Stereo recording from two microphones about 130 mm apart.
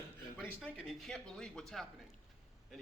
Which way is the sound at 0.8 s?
5° left (ahead or behind).